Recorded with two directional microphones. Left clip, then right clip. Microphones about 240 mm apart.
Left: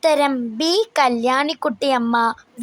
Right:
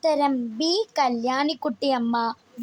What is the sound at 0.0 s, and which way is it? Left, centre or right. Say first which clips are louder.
Speech: left 5 dB; centre.